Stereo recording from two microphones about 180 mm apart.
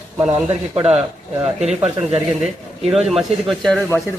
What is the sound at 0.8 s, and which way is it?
Speech, 35° right (ahead or behind).